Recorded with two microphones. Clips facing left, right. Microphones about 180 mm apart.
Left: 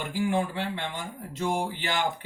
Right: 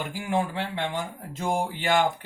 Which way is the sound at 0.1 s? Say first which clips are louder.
Left 2 dB; 45° right (ahead or behind).